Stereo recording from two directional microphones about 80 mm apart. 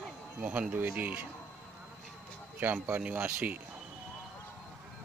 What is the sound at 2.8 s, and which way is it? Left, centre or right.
Speech, centre.